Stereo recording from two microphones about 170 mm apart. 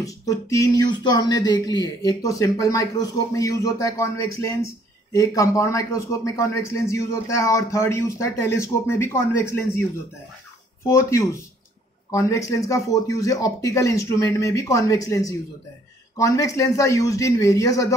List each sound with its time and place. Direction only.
0.0 s speech: 20° left (ahead or behind)
10.9 s speech: 15° left (ahead or behind)